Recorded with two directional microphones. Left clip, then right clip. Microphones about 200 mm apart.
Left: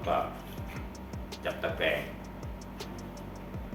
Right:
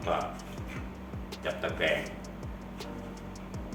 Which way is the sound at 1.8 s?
15° right (ahead or behind).